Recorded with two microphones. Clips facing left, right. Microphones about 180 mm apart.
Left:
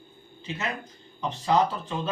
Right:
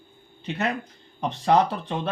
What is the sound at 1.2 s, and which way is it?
Speech, 65° right (ahead or behind).